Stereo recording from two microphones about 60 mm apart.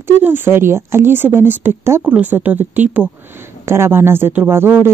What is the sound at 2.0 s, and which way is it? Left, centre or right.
Speech, right.